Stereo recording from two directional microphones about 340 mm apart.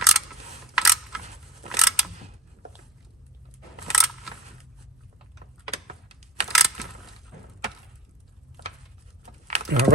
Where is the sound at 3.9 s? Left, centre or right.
Centre.